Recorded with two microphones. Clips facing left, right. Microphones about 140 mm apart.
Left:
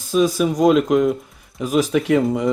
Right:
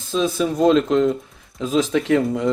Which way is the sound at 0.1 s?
15° left (ahead or behind).